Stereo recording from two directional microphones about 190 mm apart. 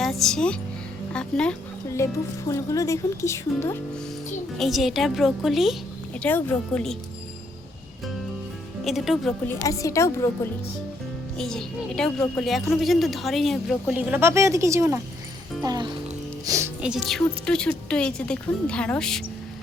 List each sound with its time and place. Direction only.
0.0 s a woman's voice: centre (ahead or behind)
4.5 s a woman's voice: centre (ahead or behind)
6.1 s speech: 10° left (ahead or behind)
8.8 s a woman's voice: centre (ahead or behind)
9.5 s speech: 15° left (ahead or behind)
11.3 s a woman's voice: 5° left (ahead or behind)
14.1 s a woman's voice: 15° right (ahead or behind)
16.8 s a woman's voice: 5° right (ahead or behind)